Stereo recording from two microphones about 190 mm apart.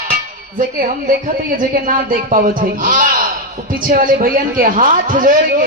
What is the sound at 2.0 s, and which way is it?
A man's voice, 45° right (ahead or behind).